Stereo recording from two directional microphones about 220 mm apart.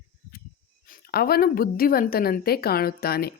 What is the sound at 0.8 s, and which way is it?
A woman's voice, 40° left (ahead or behind).